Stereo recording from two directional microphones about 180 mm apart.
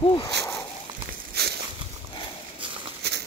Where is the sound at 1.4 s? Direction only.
60° right (ahead or behind).